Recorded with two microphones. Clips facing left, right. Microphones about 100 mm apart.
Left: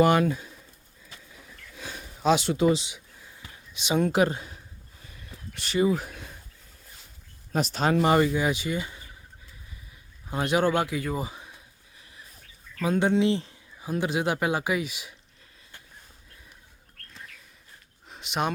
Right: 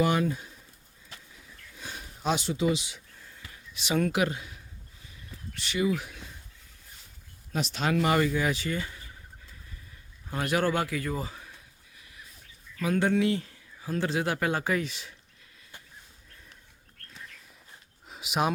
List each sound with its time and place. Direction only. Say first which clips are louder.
0.0 s speech: left 5 dB; 70° left (ahead or behind)
1.4 s a sound: left 5 dB; 80° left
2.3 s speech: left 6 dB; 80° left
2.9 s a sound: left 1 dB; 10° left (ahead or behind)
4.1 s speech: left 5 dB; 35° left (ahead or behind)
4.9 s a sound: left 2 dB; 55° left (ahead or behind)
5.6 s speech: left 4 dB; 35° left (ahead or behind)
7.5 s speech: left 4 dB; 40° left (ahead or behind); by 9.0 s 15° left (ahead or behind)
10.2 s a man's voice: left 3 dB; 20° left (ahead or behind)
12.8 s speech: left 2 dB; 20° left (ahead or behind)
18.1 s speech: right 1 dB; 5° right (ahead or behind)